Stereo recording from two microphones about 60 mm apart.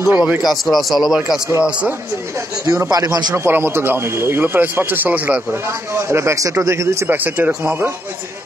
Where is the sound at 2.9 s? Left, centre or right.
Right.